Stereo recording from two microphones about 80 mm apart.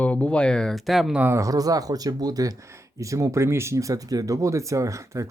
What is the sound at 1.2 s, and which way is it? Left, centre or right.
Speech, right.